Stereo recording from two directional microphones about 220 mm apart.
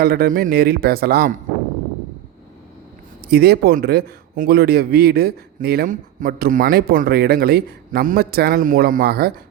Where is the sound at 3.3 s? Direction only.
45° right (ahead or behind).